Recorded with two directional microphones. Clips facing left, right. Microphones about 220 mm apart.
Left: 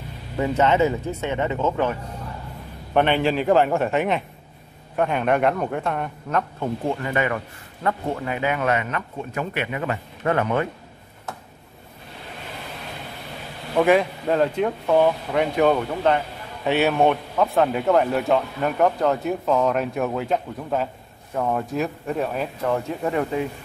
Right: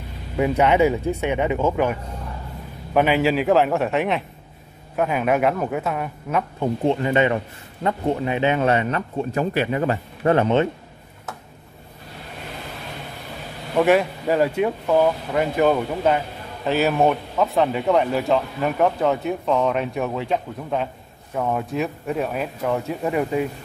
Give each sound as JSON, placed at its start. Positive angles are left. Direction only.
{"t": 0.4, "sound": "speech", "side_deg": -15}
{"t": 6.6, "sound": "a man's voice", "side_deg": -20}
{"t": 13.7, "sound": "speech", "side_deg": 0}